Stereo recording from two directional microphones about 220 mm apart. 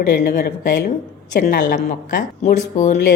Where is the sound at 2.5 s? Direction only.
30° left (ahead or behind).